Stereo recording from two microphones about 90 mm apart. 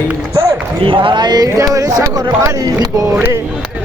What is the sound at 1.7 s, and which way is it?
Speech, 40° right (ahead or behind).